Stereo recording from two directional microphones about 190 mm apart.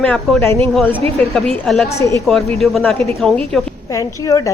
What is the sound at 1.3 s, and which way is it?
Speech, centre (ahead or behind).